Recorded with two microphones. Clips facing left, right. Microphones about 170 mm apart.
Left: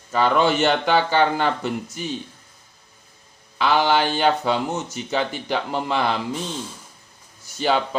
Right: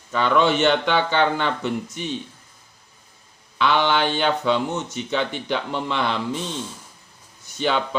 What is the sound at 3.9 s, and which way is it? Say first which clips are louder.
Speech: left 1 dB; 5° left (ahead or behind).